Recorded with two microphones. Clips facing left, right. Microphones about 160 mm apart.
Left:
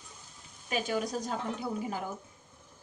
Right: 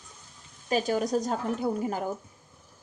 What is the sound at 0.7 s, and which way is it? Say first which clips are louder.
Speech: right 6 dB; 40° right (ahead or behind).